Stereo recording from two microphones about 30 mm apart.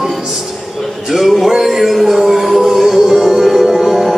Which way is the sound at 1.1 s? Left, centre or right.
Centre.